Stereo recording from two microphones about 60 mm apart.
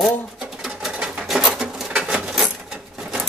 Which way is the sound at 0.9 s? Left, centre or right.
Centre.